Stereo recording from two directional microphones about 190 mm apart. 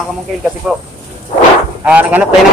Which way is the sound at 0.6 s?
5° right (ahead or behind).